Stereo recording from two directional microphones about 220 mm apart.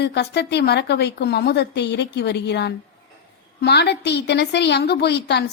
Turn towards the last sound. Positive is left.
turn(degrees=50)  # may be behind; listen again after turning